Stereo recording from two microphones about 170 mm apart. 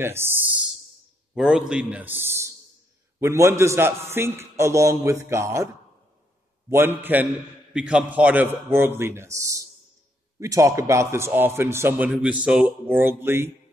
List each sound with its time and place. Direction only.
0.0 s a man's voice: 15° right (ahead or behind)
1.3 s a man's voice: centre (ahead or behind); by 5.7 s 20° right (ahead or behind)
6.7 s a man's voice: 15° right (ahead or behind)